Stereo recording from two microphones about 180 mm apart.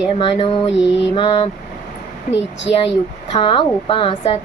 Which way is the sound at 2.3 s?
80° left.